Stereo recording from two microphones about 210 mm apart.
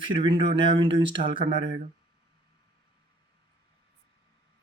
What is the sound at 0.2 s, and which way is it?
Speech, 25° right (ahead or behind).